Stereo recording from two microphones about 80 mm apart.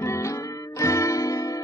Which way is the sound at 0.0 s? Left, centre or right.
Left.